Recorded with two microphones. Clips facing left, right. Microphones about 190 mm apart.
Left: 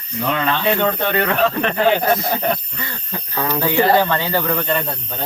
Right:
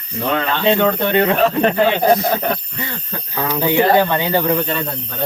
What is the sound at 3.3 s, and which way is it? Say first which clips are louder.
Speech: right 2 dB; 10° right (ahead or behind).